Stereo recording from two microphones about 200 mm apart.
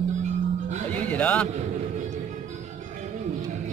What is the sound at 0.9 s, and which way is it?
Speech, 5° left (ahead or behind).